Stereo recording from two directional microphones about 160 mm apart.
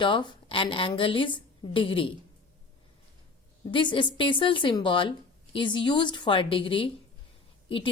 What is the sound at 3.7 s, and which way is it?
A woman's voice, 30° left (ahead or behind).